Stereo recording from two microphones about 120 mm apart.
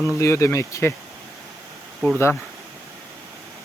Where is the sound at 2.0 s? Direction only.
Centre (ahead or behind).